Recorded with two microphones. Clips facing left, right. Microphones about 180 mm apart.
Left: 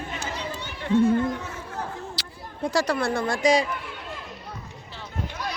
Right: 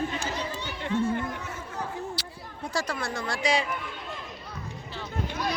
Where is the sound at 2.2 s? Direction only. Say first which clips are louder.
Right 1 dB; 90° left.